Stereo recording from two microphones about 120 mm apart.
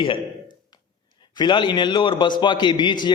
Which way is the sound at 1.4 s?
40° left (ahead or behind).